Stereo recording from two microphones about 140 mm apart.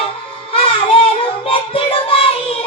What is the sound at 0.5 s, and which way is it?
Music, 40° left (ahead or behind).